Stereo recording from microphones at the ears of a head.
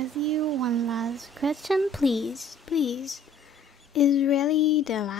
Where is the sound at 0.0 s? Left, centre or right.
Right.